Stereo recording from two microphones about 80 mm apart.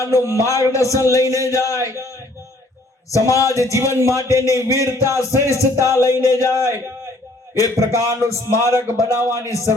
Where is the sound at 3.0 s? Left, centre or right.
Left.